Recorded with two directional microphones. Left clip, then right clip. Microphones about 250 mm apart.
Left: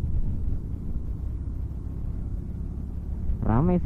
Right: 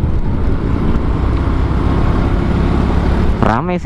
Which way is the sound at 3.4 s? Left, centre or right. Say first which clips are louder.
Right 11 dB; centre.